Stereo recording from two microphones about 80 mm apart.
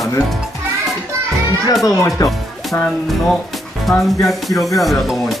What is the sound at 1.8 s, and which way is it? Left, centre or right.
Speech, left.